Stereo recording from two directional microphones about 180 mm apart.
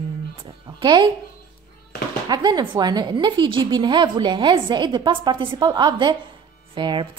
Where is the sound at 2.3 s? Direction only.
20° right (ahead or behind).